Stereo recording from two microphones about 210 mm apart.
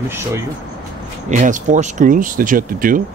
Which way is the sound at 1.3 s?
35° right (ahead or behind).